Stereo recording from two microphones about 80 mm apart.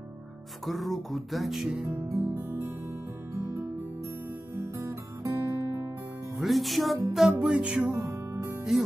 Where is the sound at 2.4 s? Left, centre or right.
Right.